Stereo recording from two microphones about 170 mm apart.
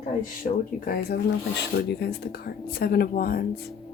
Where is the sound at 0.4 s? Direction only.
55° left (ahead or behind).